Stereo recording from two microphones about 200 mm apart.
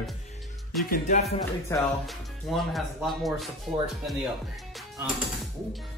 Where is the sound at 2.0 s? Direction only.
Centre (ahead or behind).